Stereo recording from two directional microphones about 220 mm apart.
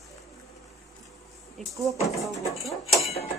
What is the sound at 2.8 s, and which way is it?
Cutlery, 30° left (ahead or behind).